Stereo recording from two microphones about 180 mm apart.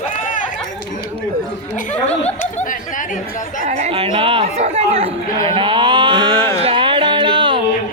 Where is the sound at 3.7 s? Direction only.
35° right (ahead or behind).